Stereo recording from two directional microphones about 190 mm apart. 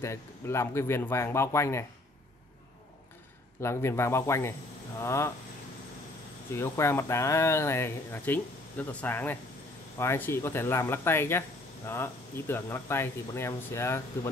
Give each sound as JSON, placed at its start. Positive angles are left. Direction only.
{"t": 0.0, "sound": "speech", "side_deg": 15}
{"t": 3.6, "sound": "speech", "side_deg": 15}
{"t": 6.5, "sound": "speech", "side_deg": 15}